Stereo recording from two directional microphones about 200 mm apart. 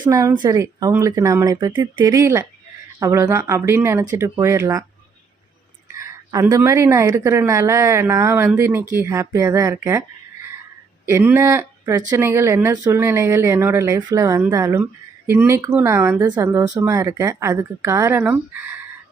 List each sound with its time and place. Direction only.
0.0 s speech: 15° right (ahead or behind)
6.0 s speech: 15° right (ahead or behind)
11.0 s speech: 10° right (ahead or behind)